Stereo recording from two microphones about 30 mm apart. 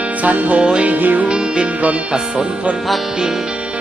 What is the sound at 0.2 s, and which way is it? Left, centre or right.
Music, right.